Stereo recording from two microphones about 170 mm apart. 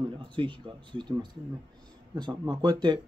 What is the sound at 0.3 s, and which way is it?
Speech, 30° right (ahead or behind).